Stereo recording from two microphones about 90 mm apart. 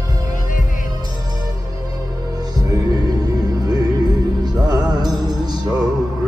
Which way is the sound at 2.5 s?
45° right (ahead or behind).